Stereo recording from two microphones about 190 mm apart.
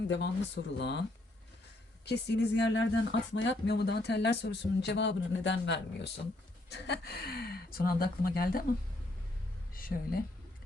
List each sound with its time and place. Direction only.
0.1 s speech: 65° left (ahead or behind)
2.0 s speech: 70° left (ahead or behind); by 8.6 s 50° left (ahead or behind)
9.7 s speech: 50° left (ahead or behind)